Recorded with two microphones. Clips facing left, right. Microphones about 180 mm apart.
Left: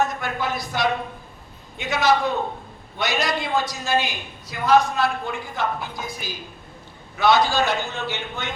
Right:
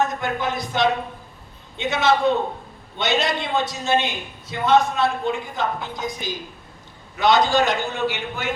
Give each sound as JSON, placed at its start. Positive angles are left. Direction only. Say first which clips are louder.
{"t": 0.0, "sound": "a man's voice", "louder": "right 1 dB", "side_deg": -20}